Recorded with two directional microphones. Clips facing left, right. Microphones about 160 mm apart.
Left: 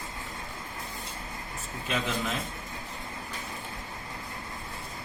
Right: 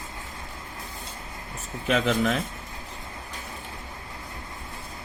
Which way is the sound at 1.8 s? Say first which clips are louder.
Right 8 dB; 90° right.